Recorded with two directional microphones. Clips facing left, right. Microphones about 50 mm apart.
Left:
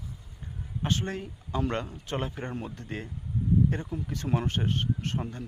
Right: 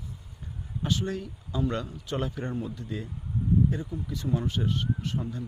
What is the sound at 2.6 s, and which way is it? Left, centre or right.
Speech, left.